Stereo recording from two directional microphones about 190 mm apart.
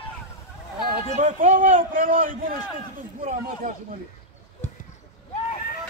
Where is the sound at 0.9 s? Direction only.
45° right (ahead or behind).